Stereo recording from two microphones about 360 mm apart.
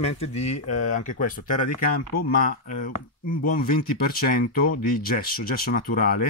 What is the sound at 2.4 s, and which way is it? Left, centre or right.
Speech, left.